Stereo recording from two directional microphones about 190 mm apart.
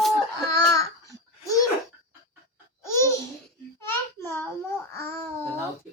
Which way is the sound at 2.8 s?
15° left (ahead or behind).